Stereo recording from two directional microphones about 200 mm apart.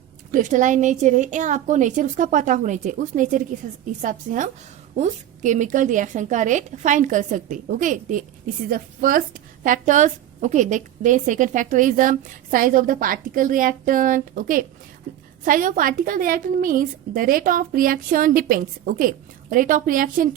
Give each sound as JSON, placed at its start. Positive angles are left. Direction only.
{"t": 0.3, "sound": "a woman's voice", "side_deg": -40}